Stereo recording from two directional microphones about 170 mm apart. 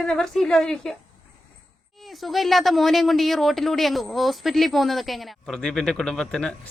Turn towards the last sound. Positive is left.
turn(degrees=5)  # may be behind; listen again after turning